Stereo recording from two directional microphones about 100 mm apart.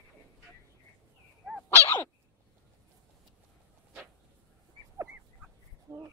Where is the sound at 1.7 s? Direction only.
25° left (ahead or behind).